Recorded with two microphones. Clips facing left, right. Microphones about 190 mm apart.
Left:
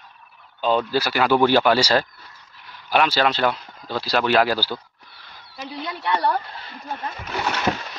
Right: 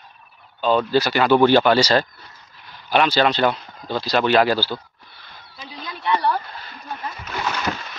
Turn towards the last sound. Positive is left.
turn(degrees=25)  # may be behind; listen again after turning